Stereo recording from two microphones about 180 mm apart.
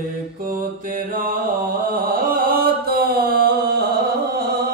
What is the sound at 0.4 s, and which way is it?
Mantra, 50° right (ahead or behind).